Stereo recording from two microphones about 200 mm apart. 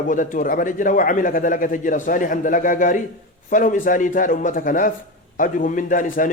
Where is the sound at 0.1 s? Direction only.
40° left (ahead or behind).